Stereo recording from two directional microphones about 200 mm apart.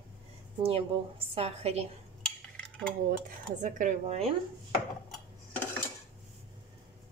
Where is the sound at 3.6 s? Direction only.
40° right (ahead or behind).